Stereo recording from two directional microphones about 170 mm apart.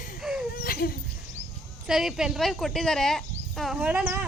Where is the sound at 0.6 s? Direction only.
60° left (ahead or behind).